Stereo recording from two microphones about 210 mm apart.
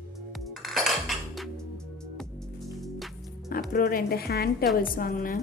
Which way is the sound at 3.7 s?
45° left (ahead or behind).